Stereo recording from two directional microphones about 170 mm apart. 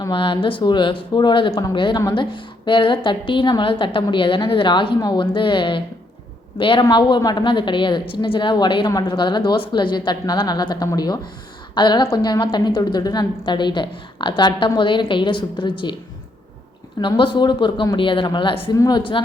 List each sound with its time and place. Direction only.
0.0 s a woman's voice: 30° left (ahead or behind)
17.0 s speech: 30° left (ahead or behind)